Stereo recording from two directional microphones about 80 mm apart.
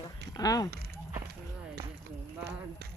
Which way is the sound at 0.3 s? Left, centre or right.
Left.